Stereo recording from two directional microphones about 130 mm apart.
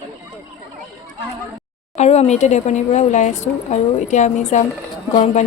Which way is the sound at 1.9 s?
60° left (ahead or behind).